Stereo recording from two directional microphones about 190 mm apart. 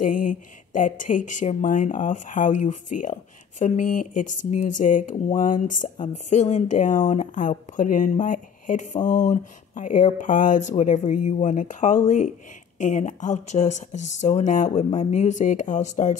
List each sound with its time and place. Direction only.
0.0 s speech: 45° left (ahead or behind)